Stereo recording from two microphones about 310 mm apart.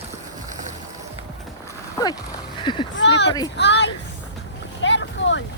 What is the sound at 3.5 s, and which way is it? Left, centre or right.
Speech, left.